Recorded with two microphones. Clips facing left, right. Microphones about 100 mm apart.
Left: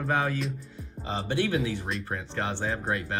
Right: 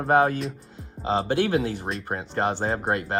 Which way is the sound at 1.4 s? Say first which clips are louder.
Right 1 dB; 80° right.